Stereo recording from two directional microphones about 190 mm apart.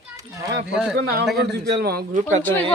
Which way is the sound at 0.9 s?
55° right (ahead or behind).